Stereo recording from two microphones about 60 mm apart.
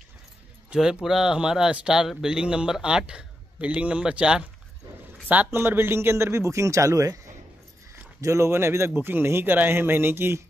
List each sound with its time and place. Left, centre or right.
0.7 s speech: centre
5.5 s speech: right
8.2 s a man's voice: right